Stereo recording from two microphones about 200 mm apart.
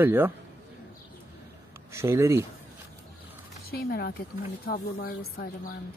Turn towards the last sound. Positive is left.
turn(degrees=45)  # may be behind; listen again after turning